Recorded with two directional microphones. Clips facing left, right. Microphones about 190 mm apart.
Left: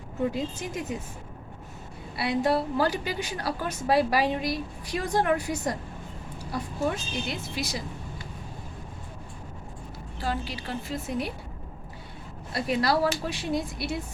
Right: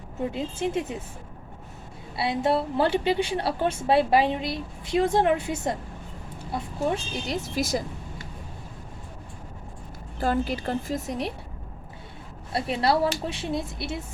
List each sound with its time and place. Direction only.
0.3 s a woman's voice: 25° right (ahead or behind)
2.1 s a woman's voice: 25° right (ahead or behind); by 7.9 s 50° right (ahead or behind)
10.2 s a woman's voice: 50° right (ahead or behind)
12.5 s a woman's voice: 30° right (ahead or behind)